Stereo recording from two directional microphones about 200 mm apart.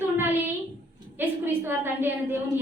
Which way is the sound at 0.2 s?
10° right (ahead or behind).